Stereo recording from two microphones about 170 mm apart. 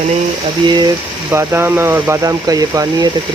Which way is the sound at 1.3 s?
15° right (ahead or behind).